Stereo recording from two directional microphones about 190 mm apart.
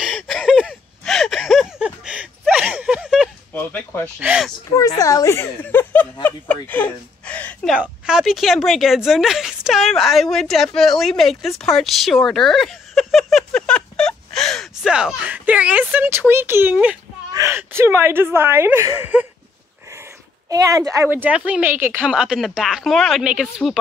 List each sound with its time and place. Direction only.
0.0 s a sound: centre (ahead or behind)
3.5 s speech: 10° left (ahead or behind)
4.2 s speech: 5° right (ahead or behind)
4.7 s speech: 20° left (ahead or behind); by 12.2 s centre (ahead or behind)
12.2 s a sound: centre (ahead or behind)
17.3 s speech: 15° right (ahead or behind)
20.4 s speech: 20° right (ahead or behind); by 23.8 s centre (ahead or behind)